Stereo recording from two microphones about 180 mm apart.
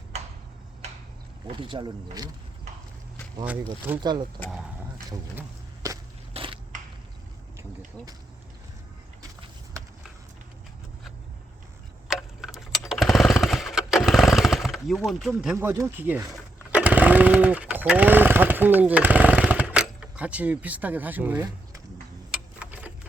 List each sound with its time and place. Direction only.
1.5 s speech: 25° right (ahead or behind)
4.0 s speech: 25° right (ahead or behind)
5.3 s a sound: 15° right (ahead or behind)
6.3 s crushing: 30° right (ahead or behind)
12.0 s tick-tock: 5° right (ahead or behind)
12.9 s chainsaw: centre (ahead or behind)
15.5 s speech: 15° right (ahead or behind)
22.3 s a sound: 5° right (ahead or behind)